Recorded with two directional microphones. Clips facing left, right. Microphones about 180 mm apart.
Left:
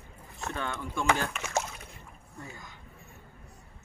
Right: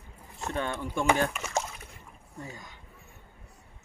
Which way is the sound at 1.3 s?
Centre (ahead or behind).